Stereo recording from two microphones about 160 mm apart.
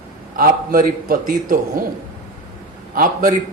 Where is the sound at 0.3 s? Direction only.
60° right (ahead or behind).